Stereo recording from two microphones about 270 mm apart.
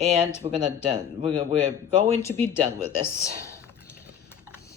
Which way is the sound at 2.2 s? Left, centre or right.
Centre.